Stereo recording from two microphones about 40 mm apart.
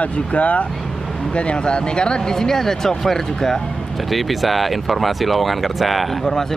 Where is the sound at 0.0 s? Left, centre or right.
Left.